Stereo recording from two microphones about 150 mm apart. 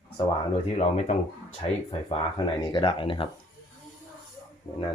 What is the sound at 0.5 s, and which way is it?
Speech, 45° left (ahead or behind).